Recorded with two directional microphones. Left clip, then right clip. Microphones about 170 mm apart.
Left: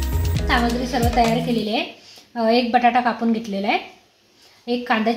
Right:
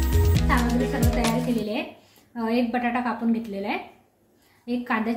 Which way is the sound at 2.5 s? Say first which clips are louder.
Left 9 dB; 55° left (ahead or behind).